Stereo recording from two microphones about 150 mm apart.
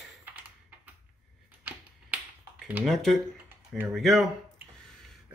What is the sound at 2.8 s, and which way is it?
Speech, centre (ahead or behind).